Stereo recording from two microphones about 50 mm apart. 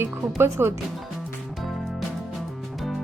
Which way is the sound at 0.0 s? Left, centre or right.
Right.